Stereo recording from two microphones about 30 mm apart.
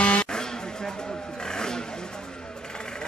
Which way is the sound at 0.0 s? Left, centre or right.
Left.